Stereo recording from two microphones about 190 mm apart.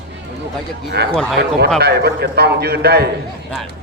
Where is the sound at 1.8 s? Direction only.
60° right (ahead or behind).